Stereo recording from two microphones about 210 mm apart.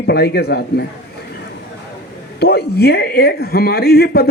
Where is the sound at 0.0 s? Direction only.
50° left (ahead or behind).